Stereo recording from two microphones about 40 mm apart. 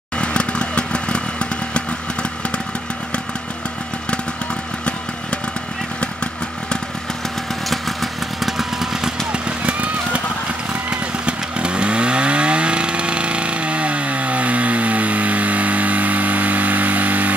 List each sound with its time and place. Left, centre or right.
0.2 s vehicle: left
7.7 s motorcycle: centre
9.3 s vehicle: right